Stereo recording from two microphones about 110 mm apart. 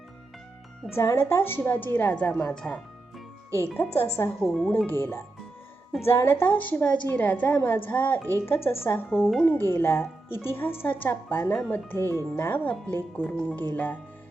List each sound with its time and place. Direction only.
0.9 s speech: 25° left (ahead or behind)
3.9 s a woman's voice: 20° left (ahead or behind)
9.1 s speech: 5° right (ahead or behind)
9.4 s a woman's voice: 20° left (ahead or behind)